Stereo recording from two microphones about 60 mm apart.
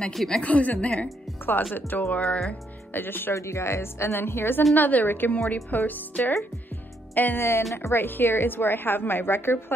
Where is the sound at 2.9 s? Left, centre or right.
Left.